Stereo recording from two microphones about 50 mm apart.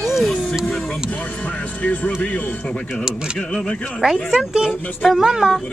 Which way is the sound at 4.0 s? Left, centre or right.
Centre.